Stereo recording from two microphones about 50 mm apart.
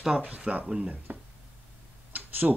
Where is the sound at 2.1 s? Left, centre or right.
Right.